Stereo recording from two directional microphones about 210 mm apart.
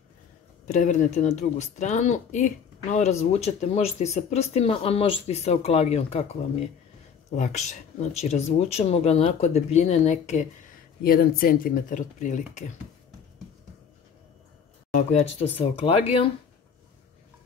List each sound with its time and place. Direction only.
0.7 s speech: 35° left (ahead or behind)
7.3 s speech: 35° left (ahead or behind)
11.0 s speech: 45° left (ahead or behind)
15.0 s speech: 30° left (ahead or behind)